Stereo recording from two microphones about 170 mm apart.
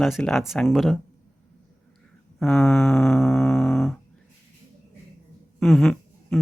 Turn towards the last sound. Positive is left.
turn(degrees=0)  # may be behind; listen again after turning